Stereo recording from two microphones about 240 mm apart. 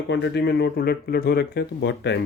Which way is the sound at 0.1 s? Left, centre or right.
Left.